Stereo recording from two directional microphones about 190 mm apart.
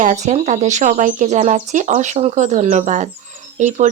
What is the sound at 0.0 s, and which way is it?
Speech, 40° right (ahead or behind).